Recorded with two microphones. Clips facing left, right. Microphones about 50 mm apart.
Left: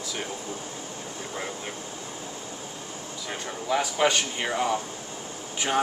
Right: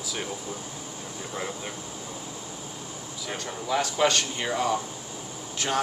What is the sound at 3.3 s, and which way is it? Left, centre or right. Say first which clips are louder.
Speech: left 1 dB; centre.